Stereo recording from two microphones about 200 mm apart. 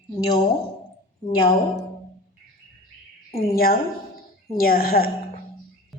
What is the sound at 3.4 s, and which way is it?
A woman's voice, 50° left (ahead or behind).